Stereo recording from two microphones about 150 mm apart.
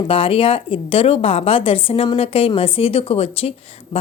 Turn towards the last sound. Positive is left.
turn(degrees=40)  # may be behind; listen again after turning